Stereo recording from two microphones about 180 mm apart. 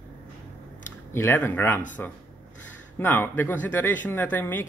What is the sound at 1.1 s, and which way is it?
Speech, 10° left (ahead or behind).